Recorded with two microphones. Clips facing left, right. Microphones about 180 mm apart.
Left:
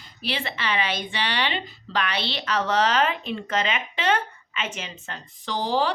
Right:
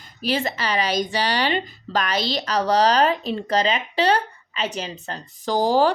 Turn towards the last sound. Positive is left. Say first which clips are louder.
# right 6 dB
turn(degrees=-45)  # may be behind; listen again after turning